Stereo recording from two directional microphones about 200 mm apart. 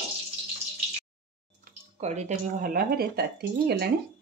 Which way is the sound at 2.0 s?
35° right (ahead or behind).